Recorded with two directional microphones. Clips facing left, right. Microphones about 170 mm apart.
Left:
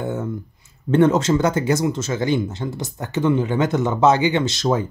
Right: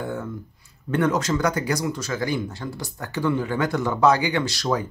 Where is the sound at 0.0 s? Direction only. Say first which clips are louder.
Left 4 dB; 20° left (ahead or behind).